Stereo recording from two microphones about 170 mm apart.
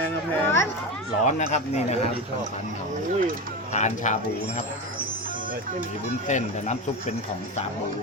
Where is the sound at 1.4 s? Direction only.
40° left (ahead or behind).